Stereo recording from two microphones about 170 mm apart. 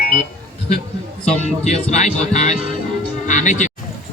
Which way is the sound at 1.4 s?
40° left (ahead or behind).